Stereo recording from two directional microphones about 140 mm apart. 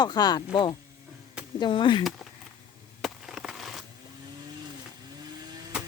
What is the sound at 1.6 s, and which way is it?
Speech, 35° left (ahead or behind).